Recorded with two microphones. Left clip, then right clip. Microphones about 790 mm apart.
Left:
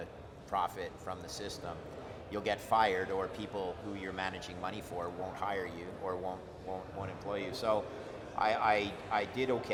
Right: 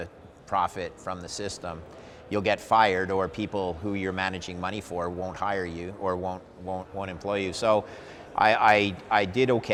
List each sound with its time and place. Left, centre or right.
0.5 s speech: right